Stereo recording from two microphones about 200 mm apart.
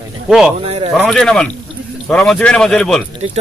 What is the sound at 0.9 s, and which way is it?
Speech, 5° left (ahead or behind).